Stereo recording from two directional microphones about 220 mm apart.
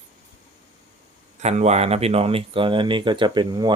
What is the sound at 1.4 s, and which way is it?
Speech, 30° right (ahead or behind).